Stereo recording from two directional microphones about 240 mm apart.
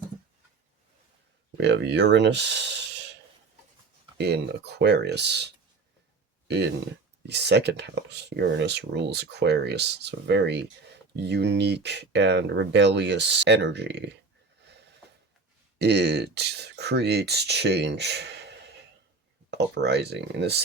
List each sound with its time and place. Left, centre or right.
1.5 s speech: right
4.2 s speech: right
6.5 s speech: right
15.8 s speech: right